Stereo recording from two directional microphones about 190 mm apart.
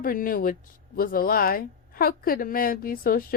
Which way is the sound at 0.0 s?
50° left (ahead or behind).